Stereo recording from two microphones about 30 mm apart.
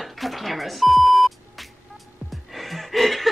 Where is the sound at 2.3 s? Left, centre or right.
Centre.